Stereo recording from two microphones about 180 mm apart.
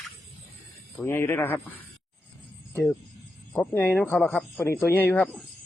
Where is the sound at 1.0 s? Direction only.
10° left (ahead or behind).